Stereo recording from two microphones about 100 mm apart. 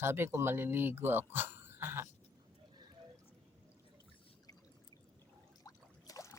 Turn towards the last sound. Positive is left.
turn(degrees=35)  # may be behind; listen again after turning